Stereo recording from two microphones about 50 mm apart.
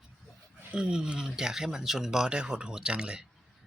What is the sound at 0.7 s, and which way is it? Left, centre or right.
Speech, centre.